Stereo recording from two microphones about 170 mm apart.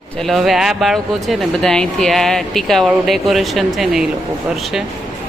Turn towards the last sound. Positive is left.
turn(degrees=0)  # may be behind; listen again after turning